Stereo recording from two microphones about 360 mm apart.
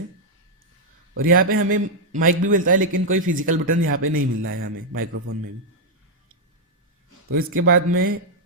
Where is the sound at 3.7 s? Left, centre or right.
Right.